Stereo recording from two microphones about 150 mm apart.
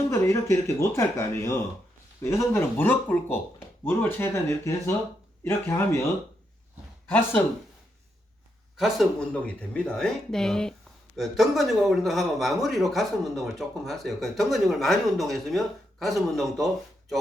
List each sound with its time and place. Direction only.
0.1 s speech: 20° left (ahead or behind)
8.8 s speech: 5° left (ahead or behind)